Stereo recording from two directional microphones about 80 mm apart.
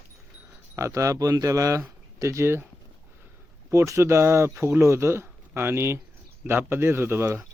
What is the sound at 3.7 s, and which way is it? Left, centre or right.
Speech, right.